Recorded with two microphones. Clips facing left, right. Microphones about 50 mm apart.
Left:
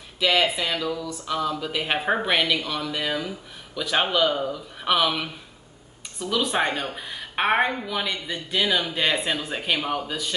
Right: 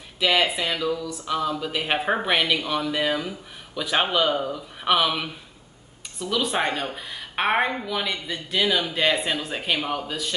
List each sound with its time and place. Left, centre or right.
0.2 s speech: centre